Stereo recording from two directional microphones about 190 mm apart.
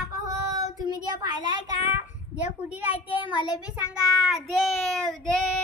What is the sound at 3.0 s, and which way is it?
Speech, 10° right (ahead or behind).